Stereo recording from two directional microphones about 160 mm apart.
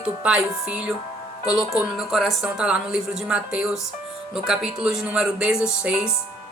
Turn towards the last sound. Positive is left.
turn(degrees=-5)  # may be behind; listen again after turning